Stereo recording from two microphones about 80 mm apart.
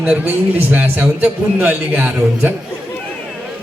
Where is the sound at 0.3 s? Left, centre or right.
Right.